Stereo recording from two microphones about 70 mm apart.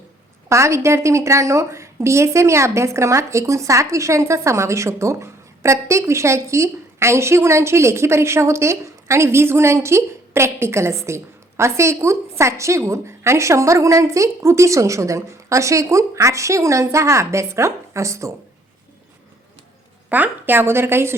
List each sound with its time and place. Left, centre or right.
0.4 s a woman's voice: right
20.1 s a woman's voice: right